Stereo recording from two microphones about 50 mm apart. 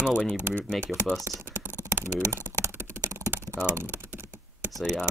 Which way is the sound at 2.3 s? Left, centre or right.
Right.